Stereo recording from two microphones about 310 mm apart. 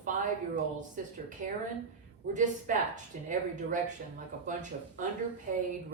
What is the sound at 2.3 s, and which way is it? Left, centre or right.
Speech, right.